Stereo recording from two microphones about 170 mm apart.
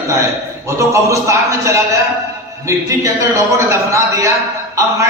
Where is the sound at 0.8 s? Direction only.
15° right (ahead or behind).